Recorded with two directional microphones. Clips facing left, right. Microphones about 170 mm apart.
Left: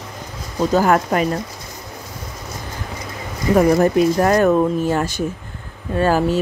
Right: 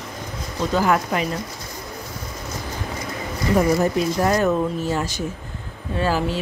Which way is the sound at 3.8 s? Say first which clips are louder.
Left 5 dB; 60° left (ahead or behind).